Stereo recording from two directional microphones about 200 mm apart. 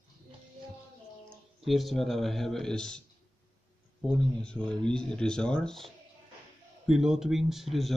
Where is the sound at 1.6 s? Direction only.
Centre (ahead or behind).